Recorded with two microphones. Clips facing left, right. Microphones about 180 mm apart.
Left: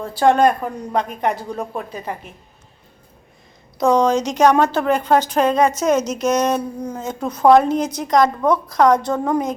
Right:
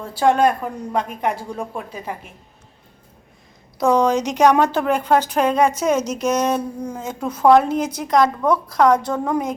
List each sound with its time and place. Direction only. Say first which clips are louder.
0.0 s speech: left 2 dB; 10° right (ahead or behind)
3.8 s speech: left 1 dB; 10° right (ahead or behind)